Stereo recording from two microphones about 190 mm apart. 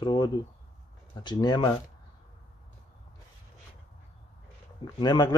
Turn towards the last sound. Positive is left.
turn(degrees=20)  # may be behind; listen again after turning